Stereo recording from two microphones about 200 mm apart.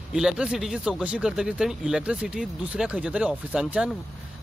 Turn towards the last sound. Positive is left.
turn(degrees=-5)  # may be behind; listen again after turning